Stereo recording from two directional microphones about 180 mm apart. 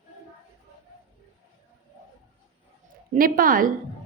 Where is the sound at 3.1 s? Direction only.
50° right (ahead or behind).